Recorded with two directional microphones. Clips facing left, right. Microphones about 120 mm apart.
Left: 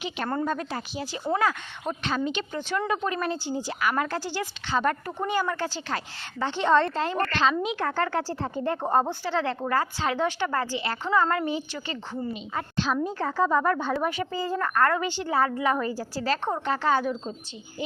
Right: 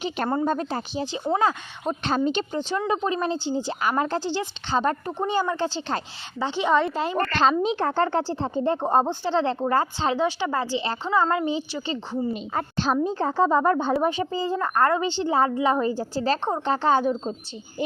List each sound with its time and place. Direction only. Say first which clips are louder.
0.4 s speech: right 4 dB; 30° right (ahead or behind)
2.0 s a woman's voice: right 5 dB; 35° right (ahead or behind); by 7.3 s 15° right (ahead or behind)
7.6 s speech: right 4 dB; 30° right (ahead or behind)
10.2 s a woman's voice: right 2 dB; 15° right (ahead or behind)
12.3 s a woman's voice: right 4 dB; 40° right (ahead or behind)